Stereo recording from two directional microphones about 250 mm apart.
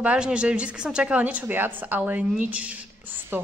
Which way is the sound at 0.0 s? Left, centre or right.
Centre.